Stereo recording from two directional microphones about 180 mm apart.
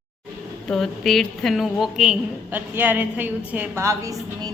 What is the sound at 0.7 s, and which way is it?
A woman's voice, centre (ahead or behind).